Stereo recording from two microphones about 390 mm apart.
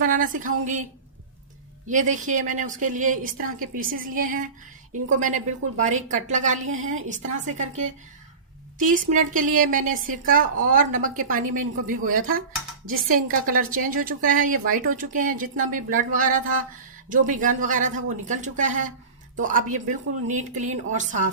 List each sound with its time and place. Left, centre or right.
0.0 s speech: centre
1.9 s speech: centre
5.8 s a woman's voice: centre
12.9 s speech: right
13.5 s speech: right